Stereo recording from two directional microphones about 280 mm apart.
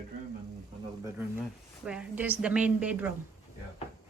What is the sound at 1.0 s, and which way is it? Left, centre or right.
A woman's voice, centre.